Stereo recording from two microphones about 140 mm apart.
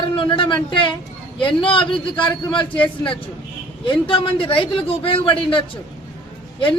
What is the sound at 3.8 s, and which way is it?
A man's voice, 40° left (ahead or behind).